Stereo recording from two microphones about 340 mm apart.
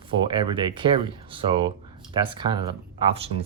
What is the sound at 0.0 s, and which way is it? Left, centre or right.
Speech, centre.